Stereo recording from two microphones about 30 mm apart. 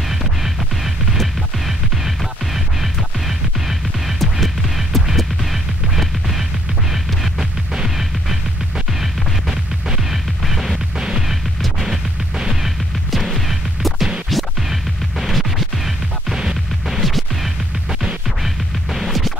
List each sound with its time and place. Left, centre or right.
0.1 s music: centre
5.1 s a sound: centre
10.4 s music: centre
11.0 s music: right
11.6 s music: centre
14.3 s scratch: centre
16.9 s music: centre